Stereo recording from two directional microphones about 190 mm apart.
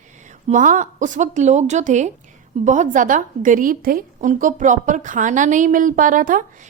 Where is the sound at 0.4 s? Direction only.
40° right (ahead or behind).